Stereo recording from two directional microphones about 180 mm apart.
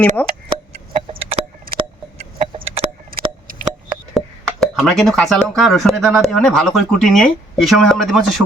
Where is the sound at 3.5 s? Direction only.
50° right (ahead or behind).